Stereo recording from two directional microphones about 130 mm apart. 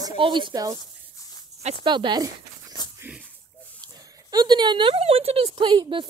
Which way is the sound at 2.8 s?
35° left (ahead or behind).